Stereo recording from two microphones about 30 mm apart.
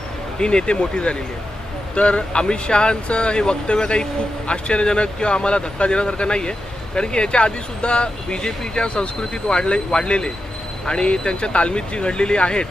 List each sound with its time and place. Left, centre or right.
0.3 s speech: left